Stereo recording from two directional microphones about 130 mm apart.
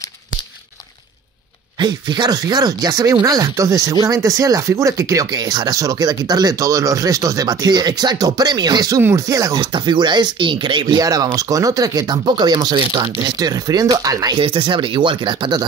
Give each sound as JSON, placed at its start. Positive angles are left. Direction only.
{"t": 1.8, "sound": "speech", "side_deg": -35}
{"t": 9.6, "sound": "speech", "side_deg": -40}
{"t": 14.4, "sound": "speech", "side_deg": -40}